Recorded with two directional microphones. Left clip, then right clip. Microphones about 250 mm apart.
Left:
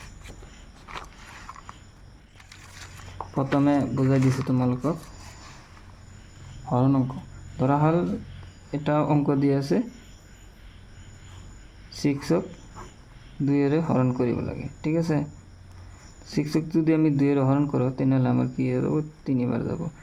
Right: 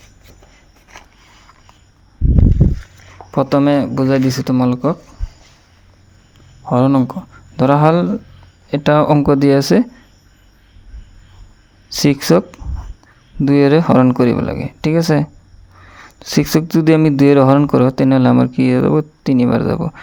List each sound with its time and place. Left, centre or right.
3.3 s speech: right
6.7 s speech: right
7.5 s speech: right
11.9 s speech: right
13.4 s speech: right